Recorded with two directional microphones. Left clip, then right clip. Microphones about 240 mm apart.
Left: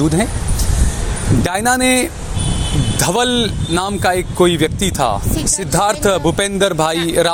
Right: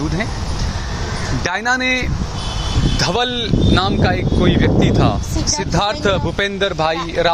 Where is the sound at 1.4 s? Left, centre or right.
Left.